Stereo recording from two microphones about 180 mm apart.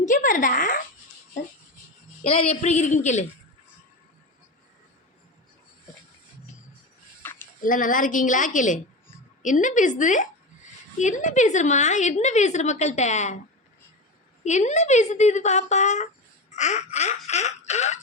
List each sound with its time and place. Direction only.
0.0 s a woman's voice: 45° left (ahead or behind)
2.2 s a woman's voice: 35° left (ahead or behind)
7.2 s a sound: 10° left (ahead or behind)
7.6 s a woman's voice: 50° left (ahead or behind)
14.4 s a woman's voice: 40° left (ahead or behind)